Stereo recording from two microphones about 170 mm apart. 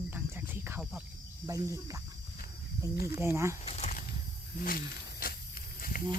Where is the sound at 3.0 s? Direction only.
15° right (ahead or behind).